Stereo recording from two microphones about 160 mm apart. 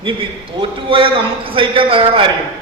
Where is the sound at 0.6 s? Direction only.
35° right (ahead or behind).